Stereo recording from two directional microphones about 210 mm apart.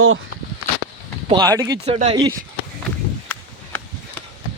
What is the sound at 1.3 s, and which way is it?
Speech, 15° right (ahead or behind).